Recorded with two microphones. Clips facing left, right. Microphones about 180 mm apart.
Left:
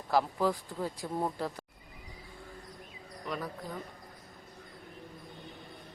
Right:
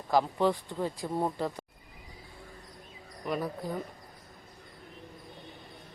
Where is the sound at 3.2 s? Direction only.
15° right (ahead or behind).